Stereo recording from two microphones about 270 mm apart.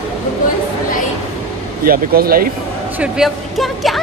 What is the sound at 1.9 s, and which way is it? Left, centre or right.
Speech, right.